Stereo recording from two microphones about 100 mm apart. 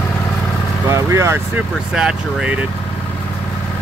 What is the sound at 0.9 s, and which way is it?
Speech, 30° right (ahead or behind).